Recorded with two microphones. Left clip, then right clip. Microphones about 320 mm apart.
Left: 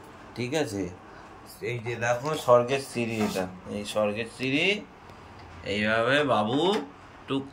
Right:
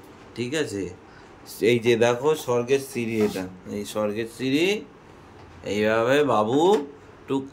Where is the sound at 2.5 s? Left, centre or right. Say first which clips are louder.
Left 2 dB; centre.